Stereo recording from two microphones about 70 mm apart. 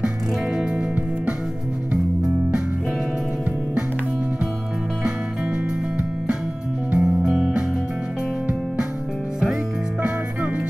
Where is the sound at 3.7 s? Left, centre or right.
Right.